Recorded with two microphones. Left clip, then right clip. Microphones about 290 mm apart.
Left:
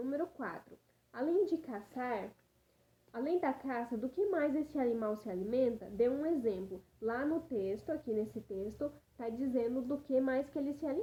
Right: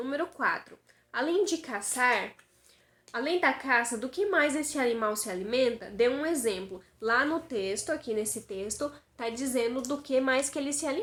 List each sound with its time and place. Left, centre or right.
0.0 s a woman's voice: centre